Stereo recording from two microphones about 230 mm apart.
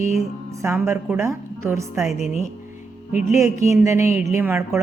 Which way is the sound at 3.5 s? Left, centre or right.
Left.